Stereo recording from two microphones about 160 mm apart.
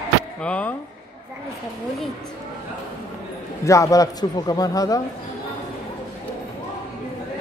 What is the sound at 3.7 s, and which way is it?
A man's voice, 20° left (ahead or behind).